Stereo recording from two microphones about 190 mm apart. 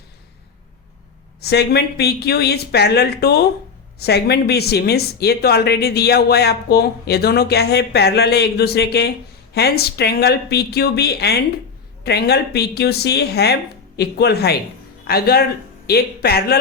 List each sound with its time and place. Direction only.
1.4 s speech: 60° left (ahead or behind)